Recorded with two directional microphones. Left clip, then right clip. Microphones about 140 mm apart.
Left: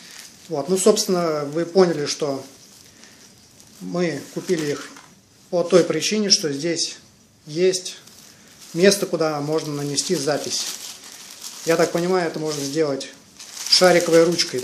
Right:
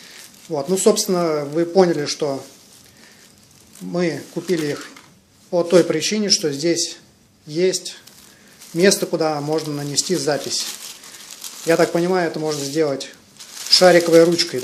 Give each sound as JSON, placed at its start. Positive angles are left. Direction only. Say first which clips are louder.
{"t": 0.5, "sound": "speech", "louder": "right 1 dB", "side_deg": -10}
{"t": 3.9, "sound": "speech", "louder": "right 2 dB", "side_deg": -15}
{"t": 11.6, "sound": "speech", "louder": "right 2 dB", "side_deg": -15}